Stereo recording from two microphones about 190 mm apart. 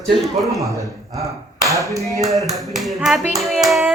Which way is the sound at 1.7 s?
15° right (ahead or behind).